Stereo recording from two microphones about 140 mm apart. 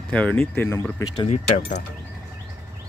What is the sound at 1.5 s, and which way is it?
Speech, 80° left.